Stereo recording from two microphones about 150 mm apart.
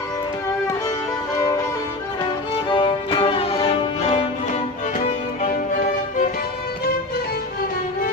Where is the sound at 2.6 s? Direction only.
35° left (ahead or behind); by 5.9 s 60° left (ahead or behind).